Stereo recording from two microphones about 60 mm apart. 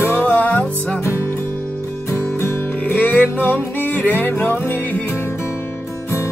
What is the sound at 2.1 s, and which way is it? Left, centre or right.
Music, left.